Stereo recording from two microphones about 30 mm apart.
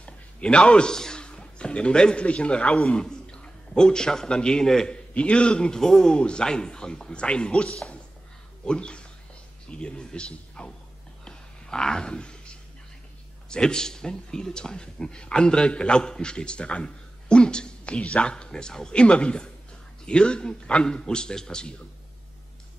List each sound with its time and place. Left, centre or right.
0.0 s a sound: left
2.2 s a man's voice: left
3.0 s a man's voice: left
5.1 s a man's voice: left
5.8 s speech: centre
6.0 s a man's voice: left
11.2 s a sound: left
13.5 s a man's voice: left
18.2 s a man's voice: left
18.9 s a man's voice: left